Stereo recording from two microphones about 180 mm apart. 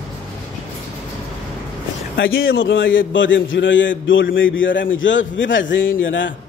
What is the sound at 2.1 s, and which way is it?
A man's voice, 90° left.